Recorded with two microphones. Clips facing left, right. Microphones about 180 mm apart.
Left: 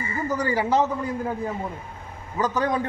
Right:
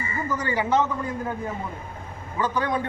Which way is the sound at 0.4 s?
35° left (ahead or behind).